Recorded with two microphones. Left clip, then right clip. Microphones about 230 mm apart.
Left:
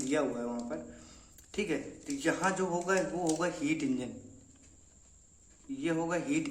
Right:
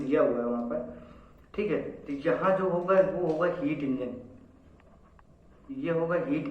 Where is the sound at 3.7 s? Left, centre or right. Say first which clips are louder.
Right 1 dB; left.